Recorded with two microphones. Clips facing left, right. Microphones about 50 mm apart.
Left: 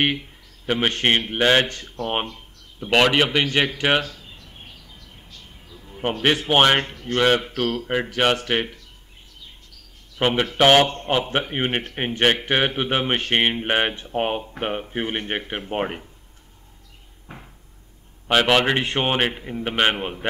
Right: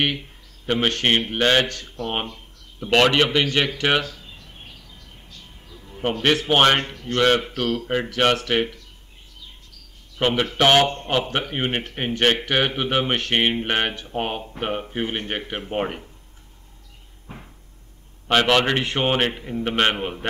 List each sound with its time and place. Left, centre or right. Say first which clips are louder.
0.7 s speech: even; centre
2.9 s a man's voice: even; centre
4.4 s a sound: even; centre
4.6 s a sound: even; left
5.5 s a sound: even; centre
6.4 s speech: left 1 dB; centre
10.2 s speech: left 1 dB; centre
11.2 s speech: left 1 dB; left
15.7 s speech: even; centre
18.2 s speech: even; centre